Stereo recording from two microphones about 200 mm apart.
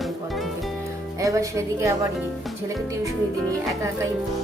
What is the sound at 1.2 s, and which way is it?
Speech, 15° right (ahead or behind).